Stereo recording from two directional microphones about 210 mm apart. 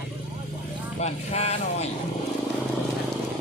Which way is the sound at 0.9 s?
30° left (ahead or behind).